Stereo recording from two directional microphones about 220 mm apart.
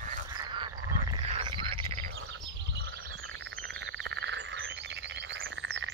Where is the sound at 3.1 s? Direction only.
60° right (ahead or behind).